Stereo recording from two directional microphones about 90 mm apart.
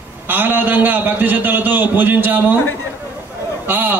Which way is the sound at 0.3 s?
20° right (ahead or behind).